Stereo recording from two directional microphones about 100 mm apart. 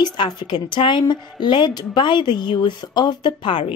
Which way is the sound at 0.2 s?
50° left (ahead or behind).